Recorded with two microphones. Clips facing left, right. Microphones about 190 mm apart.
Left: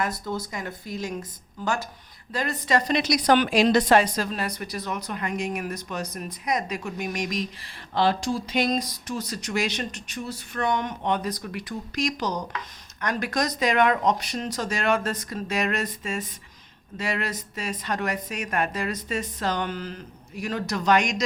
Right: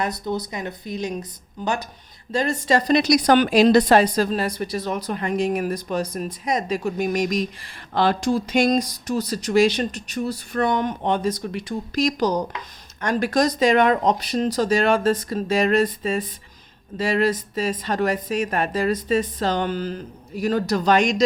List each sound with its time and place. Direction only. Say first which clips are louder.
0.3 s a woman's voice: right 4 dB; 20° right (ahead or behind)